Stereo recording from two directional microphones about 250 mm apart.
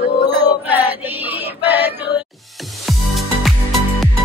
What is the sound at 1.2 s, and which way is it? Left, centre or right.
Synthetic singing, centre.